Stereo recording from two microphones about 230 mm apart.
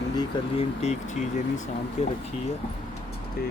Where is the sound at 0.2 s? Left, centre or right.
Left.